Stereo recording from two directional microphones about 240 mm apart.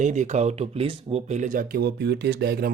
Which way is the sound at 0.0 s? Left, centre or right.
Right.